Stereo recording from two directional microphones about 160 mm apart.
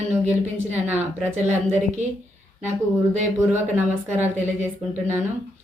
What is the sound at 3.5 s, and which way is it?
Speech, 15° right (ahead or behind).